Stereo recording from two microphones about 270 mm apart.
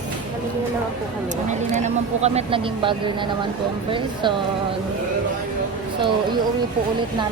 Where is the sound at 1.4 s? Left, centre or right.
Right.